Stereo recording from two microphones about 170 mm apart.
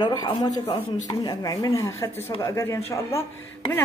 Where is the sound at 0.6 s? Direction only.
40° left (ahead or behind).